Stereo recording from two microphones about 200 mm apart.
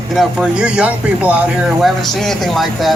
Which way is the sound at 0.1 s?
Centre (ahead or behind).